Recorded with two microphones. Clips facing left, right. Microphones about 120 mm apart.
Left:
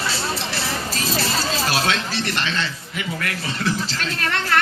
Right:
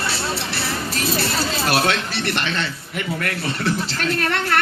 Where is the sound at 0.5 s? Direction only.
60° right (ahead or behind).